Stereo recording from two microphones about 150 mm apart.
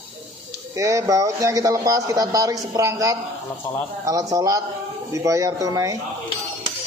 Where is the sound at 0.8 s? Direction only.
20° right (ahead or behind).